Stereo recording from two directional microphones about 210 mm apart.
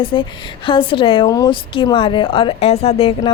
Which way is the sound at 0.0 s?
25° left (ahead or behind).